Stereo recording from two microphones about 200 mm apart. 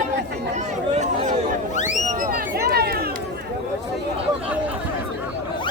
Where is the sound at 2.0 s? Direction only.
40° right (ahead or behind).